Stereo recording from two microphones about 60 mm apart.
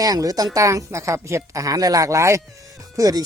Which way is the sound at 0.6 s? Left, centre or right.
Right.